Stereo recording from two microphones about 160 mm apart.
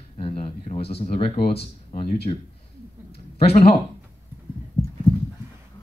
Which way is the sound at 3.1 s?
40° left (ahead or behind).